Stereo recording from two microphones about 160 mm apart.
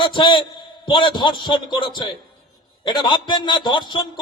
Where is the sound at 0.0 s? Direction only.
30° left (ahead or behind).